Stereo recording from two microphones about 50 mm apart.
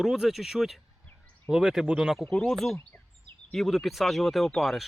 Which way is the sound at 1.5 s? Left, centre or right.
Centre.